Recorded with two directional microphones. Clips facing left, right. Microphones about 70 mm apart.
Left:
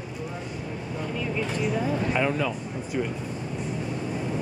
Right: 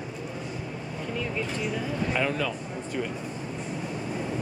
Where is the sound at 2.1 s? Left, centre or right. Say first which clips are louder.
Even; centre.